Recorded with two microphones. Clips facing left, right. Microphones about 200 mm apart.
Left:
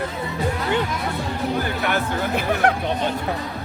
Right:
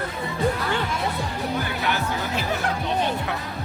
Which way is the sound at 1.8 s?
55° left (ahead or behind).